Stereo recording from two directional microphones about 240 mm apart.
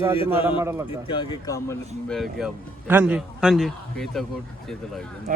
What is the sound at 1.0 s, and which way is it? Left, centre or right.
Speech, centre.